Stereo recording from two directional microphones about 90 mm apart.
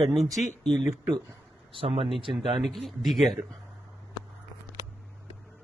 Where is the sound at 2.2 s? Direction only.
70° right (ahead or behind).